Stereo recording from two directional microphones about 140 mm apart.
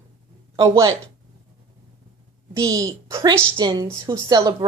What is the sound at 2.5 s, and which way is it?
Speech, 25° right (ahead or behind).